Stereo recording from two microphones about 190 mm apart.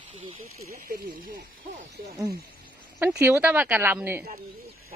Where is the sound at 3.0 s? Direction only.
10° right (ahead or behind).